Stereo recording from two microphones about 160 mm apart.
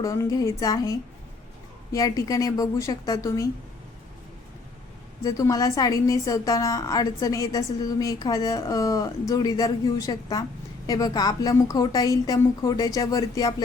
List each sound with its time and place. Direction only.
0.0 s a woman's voice: 20° left (ahead or behind)
5.2 s a woman's voice: 20° left (ahead or behind)